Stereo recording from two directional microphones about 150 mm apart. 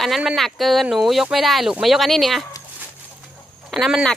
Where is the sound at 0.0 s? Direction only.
Centre (ahead or behind).